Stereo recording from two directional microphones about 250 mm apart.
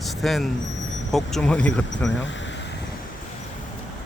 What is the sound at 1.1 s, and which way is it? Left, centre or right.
Speech, centre.